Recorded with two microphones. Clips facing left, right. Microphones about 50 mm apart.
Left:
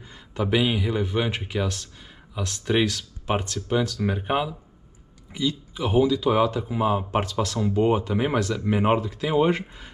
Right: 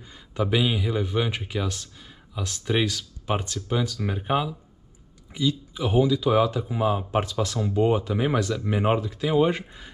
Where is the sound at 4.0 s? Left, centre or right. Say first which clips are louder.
Left 1 dB; centre.